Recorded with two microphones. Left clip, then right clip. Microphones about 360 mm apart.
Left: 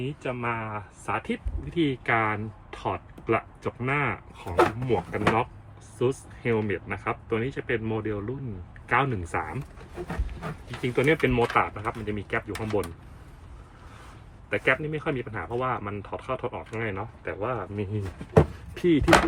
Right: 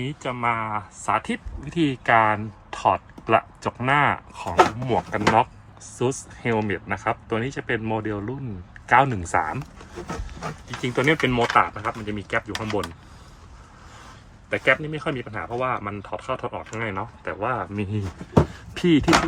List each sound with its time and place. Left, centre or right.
0.2 s speech: right
10.8 s speech: centre
14.5 s speech: centre